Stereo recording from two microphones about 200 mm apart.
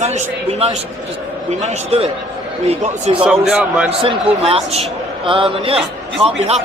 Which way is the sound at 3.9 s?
30° right (ahead or behind).